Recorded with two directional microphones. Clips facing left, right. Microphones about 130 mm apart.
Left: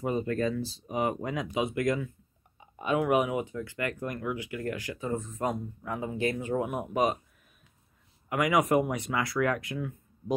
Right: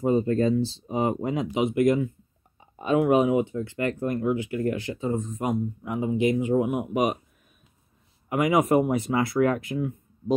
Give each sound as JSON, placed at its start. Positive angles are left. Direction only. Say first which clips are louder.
{"t": 0.0, "sound": "speech", "louder": "right 7 dB", "side_deg": -30}
{"t": 8.3, "sound": "speech", "louder": "right 4 dB", "side_deg": -25}